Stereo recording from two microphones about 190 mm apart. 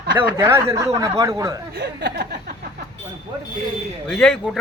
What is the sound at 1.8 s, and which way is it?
Speech, 60° right (ahead or behind).